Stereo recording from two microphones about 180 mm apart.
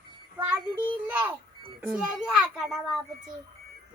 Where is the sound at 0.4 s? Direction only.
10° right (ahead or behind).